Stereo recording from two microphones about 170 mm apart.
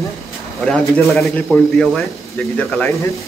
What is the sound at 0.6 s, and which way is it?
A man's voice, 5° left (ahead or behind).